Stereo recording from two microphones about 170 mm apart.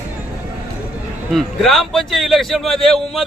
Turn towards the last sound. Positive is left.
turn(degrees=0)  # may be behind; listen again after turning